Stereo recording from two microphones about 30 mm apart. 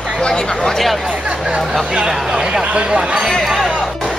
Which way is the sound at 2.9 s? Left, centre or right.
Centre.